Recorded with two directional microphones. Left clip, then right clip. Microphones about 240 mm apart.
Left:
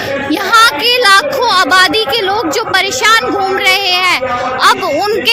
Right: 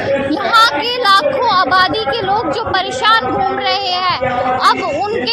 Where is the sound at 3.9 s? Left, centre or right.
Left.